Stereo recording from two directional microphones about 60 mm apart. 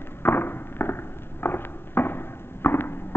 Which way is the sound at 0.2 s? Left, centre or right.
Left.